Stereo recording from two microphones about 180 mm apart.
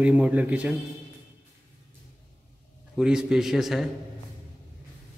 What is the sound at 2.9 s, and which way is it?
Speech, 5° right (ahead or behind).